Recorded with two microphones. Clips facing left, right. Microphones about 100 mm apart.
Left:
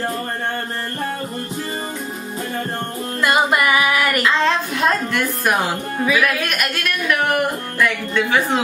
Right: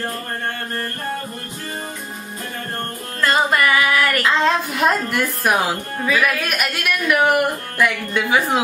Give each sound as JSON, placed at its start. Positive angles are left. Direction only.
{"t": 3.2, "sound": "music", "side_deg": 15}
{"t": 4.4, "sound": "speech", "side_deg": -5}